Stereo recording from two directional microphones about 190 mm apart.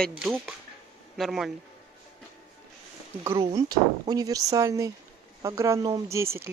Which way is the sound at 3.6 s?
20° right (ahead or behind).